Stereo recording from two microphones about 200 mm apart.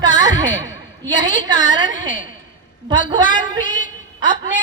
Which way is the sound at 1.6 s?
40° left (ahead or behind).